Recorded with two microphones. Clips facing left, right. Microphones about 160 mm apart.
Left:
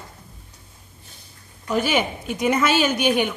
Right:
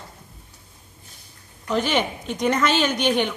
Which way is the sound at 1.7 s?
10° left (ahead or behind).